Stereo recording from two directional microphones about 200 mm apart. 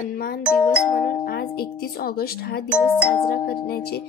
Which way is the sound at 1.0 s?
50° left (ahead or behind).